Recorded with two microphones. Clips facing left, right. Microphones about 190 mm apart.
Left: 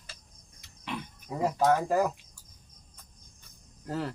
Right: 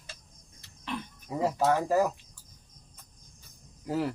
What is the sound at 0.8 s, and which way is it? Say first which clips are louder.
Cricket: right 1 dB; 15° left (ahead or behind).